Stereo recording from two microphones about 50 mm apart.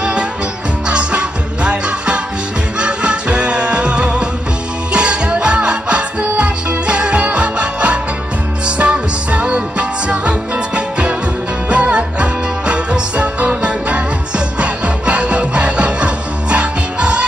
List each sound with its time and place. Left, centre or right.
0.0 s music: right